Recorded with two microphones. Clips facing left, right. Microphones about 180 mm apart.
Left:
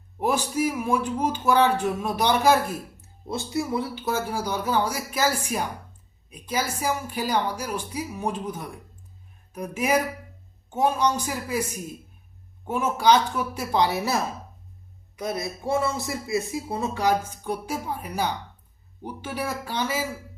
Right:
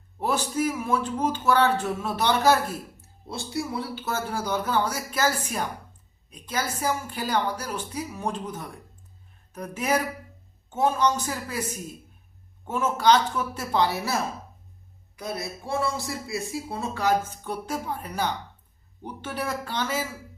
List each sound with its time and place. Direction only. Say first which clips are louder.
0.2 s speech: left 2 dB; 10° left (ahead or behind)
12.6 s speech: left 1 dB; 10° left (ahead or behind)